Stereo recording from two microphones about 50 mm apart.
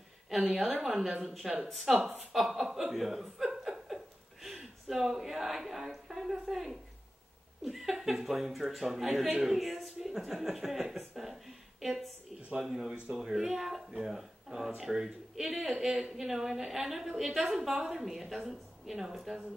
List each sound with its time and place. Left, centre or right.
0.3 s a woman's voice: centre
12.5 s a woman's voice: centre
13.4 s a woman's voice: centre